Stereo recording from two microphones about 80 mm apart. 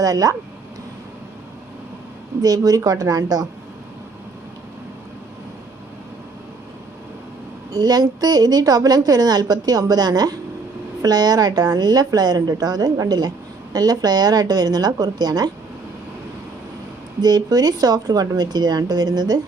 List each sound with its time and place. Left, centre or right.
0.0 s speech: right
2.4 s speech: right
7.7 s a woman's voice: right
17.2 s a woman's voice: right